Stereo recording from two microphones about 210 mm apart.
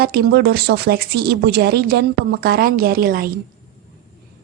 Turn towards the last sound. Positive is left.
turn(degrees=-45)  # may be behind; listen again after turning